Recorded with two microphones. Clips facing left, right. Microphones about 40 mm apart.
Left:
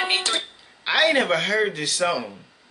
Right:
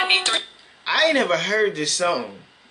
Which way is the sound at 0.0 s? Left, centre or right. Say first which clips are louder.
Right 3 dB; right.